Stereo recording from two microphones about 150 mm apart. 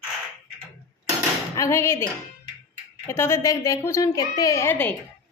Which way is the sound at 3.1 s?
20° left (ahead or behind).